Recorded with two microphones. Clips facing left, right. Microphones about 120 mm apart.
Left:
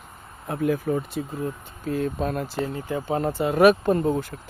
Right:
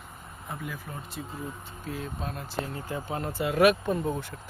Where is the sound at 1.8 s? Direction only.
50° left (ahead or behind).